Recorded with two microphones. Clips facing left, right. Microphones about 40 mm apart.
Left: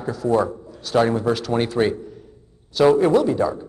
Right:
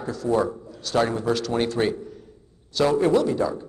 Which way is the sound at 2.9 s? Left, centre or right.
Left.